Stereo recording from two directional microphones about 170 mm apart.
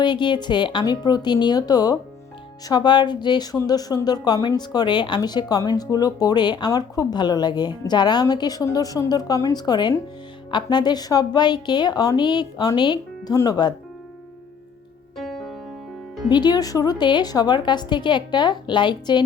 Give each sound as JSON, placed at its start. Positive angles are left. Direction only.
{"t": 0.0, "sound": "speech", "side_deg": 25}
{"t": 15.2, "sound": "music", "side_deg": 0}
{"t": 16.3, "sound": "speech", "side_deg": 25}